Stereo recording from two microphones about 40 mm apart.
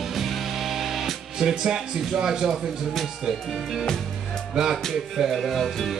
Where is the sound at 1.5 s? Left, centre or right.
Right.